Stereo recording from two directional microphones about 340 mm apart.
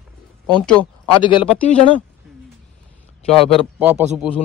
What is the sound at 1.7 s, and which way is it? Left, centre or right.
Speech, centre.